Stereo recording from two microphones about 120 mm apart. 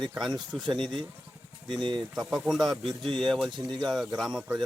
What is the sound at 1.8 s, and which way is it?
Speech, 40° right (ahead or behind).